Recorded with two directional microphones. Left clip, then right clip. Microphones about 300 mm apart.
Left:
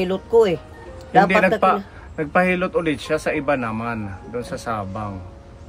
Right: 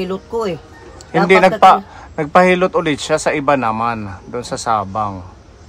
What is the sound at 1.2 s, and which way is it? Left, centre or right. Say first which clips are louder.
A man's voice: right 10 dB; centre.